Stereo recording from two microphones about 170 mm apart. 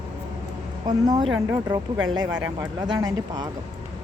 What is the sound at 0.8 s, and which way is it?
Speech, 25° right (ahead or behind).